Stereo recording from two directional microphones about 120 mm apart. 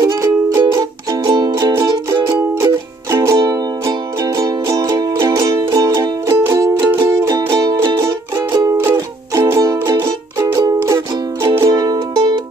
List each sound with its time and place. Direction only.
0.0 s music: 30° right (ahead or behind)
7.2 s music: 35° right (ahead or behind)